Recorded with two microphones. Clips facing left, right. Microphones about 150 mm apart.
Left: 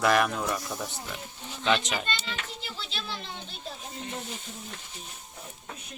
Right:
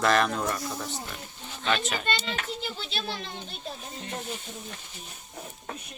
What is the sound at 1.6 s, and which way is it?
Speech, 15° left (ahead or behind).